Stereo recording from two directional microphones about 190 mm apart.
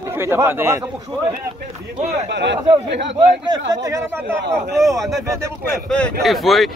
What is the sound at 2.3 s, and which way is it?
Speech, 65° right (ahead or behind).